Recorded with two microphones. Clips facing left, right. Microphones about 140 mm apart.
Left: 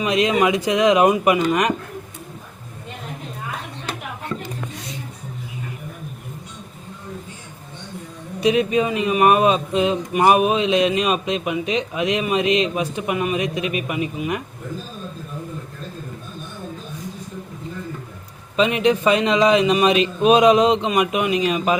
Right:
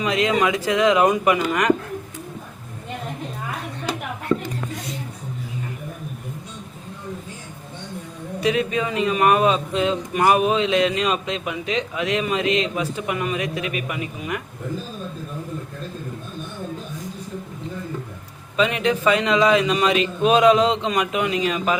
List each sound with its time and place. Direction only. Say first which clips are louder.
0.0 s a man's voice: left 2 dB; 20° left (ahead or behind)
8.4 s a man's voice: left 4 dB; 20° left (ahead or behind)
18.5 s a man's voice: left 3 dB; 20° left (ahead or behind)